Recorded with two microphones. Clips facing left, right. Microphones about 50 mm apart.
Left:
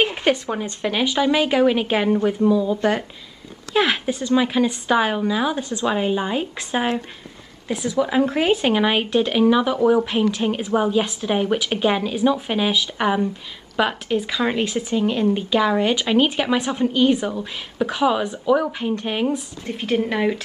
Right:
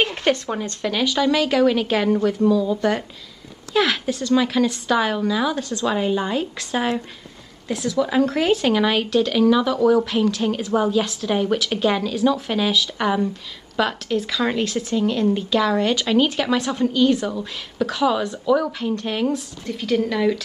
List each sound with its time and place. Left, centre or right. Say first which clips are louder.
0.0 s speech: left 1 dB; centre
19.7 s speech: even; left